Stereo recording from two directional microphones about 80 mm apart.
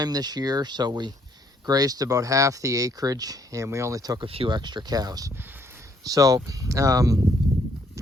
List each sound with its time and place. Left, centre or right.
0.0 s speech: right
4.2 s speech: right